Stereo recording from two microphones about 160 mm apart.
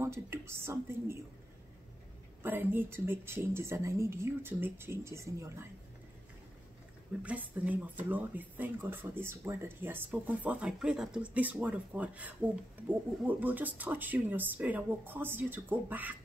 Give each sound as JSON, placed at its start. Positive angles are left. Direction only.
{"t": 0.0, "sound": "speech", "side_deg": -15}
{"t": 2.4, "sound": "speech", "side_deg": -10}
{"t": 7.2, "sound": "speech", "side_deg": -10}